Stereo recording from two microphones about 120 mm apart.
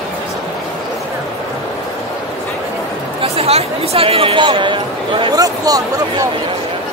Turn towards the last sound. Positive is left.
turn(degrees=-30)  # may be behind; listen again after turning